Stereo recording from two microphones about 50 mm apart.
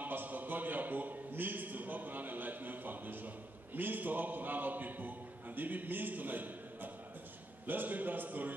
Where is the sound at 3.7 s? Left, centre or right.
Right.